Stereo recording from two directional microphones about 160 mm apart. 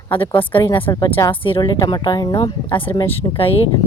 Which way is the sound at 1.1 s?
15° left (ahead or behind).